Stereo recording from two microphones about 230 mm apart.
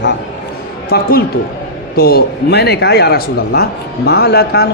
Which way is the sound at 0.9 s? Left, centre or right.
Left.